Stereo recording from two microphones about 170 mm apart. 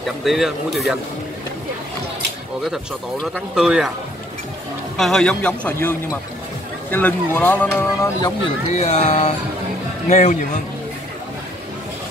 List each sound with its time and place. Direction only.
0.2 s speech: centre (ahead or behind)
2.6 s speech: centre (ahead or behind)
4.9 s speech: centre (ahead or behind)
8.7 s speech: 40° left (ahead or behind)